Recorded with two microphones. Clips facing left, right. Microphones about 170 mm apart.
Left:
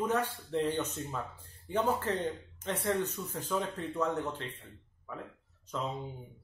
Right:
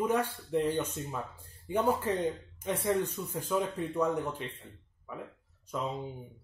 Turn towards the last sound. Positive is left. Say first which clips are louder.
# right 2 dB
turn(degrees=-10)  # may be behind; listen again after turning